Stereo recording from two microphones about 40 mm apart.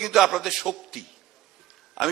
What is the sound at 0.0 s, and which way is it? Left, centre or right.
A man's voice, centre.